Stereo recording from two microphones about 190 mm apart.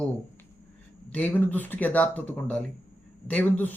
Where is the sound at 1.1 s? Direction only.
5° left (ahead or behind).